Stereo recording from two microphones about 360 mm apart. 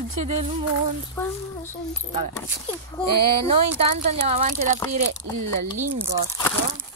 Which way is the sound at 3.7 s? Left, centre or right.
Centre.